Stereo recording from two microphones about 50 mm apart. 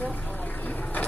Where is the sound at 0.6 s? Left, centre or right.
Left.